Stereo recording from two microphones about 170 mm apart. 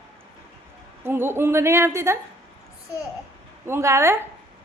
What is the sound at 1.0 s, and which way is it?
A woman's voice, 15° right (ahead or behind).